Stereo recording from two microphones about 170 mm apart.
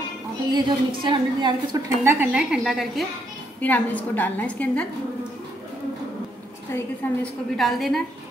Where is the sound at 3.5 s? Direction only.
10° left (ahead or behind).